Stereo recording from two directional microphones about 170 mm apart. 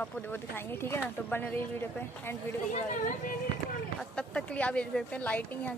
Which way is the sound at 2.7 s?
50° left (ahead or behind).